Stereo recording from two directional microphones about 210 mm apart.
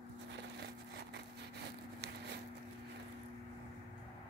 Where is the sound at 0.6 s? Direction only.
55° right (ahead or behind).